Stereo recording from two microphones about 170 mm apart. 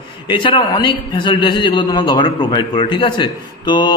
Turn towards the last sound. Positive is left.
turn(degrees=25)  # may be behind; listen again after turning